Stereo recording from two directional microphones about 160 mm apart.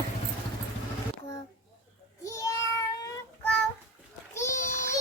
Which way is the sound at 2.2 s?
20° left (ahead or behind).